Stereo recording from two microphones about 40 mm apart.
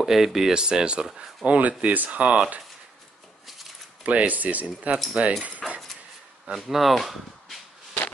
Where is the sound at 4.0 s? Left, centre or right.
Right.